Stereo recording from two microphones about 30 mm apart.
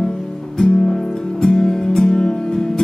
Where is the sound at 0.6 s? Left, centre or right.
Left.